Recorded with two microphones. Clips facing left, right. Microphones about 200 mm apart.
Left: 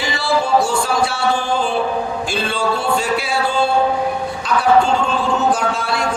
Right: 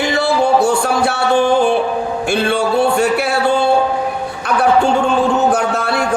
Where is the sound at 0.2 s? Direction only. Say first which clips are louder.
Right 2 dB; 60° right (ahead or behind).